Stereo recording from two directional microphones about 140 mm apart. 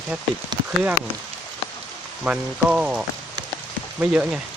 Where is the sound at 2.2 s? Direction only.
10° right (ahead or behind).